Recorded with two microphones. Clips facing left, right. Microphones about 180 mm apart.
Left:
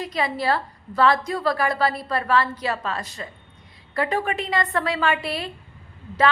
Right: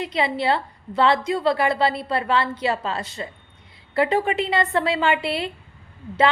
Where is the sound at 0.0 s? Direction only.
25° right (ahead or behind).